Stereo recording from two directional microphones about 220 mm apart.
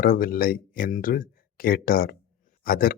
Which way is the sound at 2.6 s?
40° left (ahead or behind).